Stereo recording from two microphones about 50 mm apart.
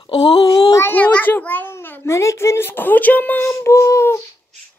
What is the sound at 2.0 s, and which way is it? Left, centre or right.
Speech, left.